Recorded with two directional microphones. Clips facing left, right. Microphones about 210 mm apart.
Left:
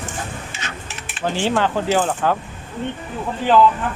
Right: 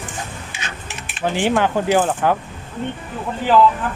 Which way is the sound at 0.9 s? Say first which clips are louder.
Right 2 dB; 15° right (ahead or behind).